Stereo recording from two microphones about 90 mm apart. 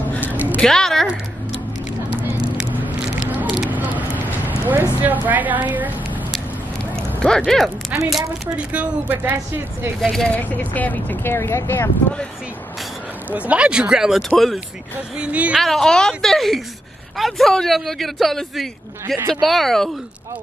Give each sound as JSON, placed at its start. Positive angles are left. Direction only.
{"t": 0.2, "sound": "a sound", "side_deg": -20}
{"t": 0.6, "sound": "a woman's voice", "side_deg": 5}
{"t": 3.4, "sound": "a sound", "side_deg": -5}
{"t": 3.7, "sound": "vehicle", "side_deg": -20}
{"t": 5.0, "sound": "a woman's voice", "side_deg": -20}
{"t": 7.0, "sound": "speech", "side_deg": 10}
{"t": 7.9, "sound": "a woman's voice", "side_deg": -15}
{"t": 10.0, "sound": "speech", "side_deg": 10}
{"t": 13.3, "sound": "speech", "side_deg": -15}
{"t": 15.1, "sound": "speech", "side_deg": -15}
{"t": 15.6, "sound": "a man's voice", "side_deg": 5}